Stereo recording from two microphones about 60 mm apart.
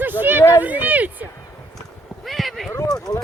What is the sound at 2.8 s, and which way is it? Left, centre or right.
Speech, left.